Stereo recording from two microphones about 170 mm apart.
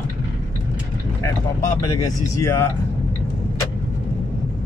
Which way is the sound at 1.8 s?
15° left (ahead or behind).